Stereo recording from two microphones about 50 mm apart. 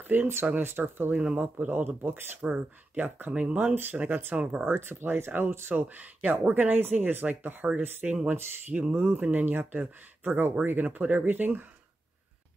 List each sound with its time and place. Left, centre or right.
0.0 s speech: right
0.6 s speech: right
1.2 s speech: right
1.7 s speech: right
2.4 s speech: right
2.9 s speech: right
3.3 s speech: right
3.5 s speech: right
4.4 s speech: centre
4.6 s speech: right
5.8 s speech: right
8.7 s speech: centre
9.1 s speech: right